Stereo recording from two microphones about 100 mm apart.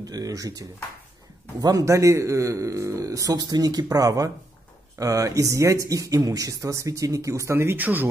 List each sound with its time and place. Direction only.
0.0 s speech: 40° right (ahead or behind); by 8.1 s 20° right (ahead or behind)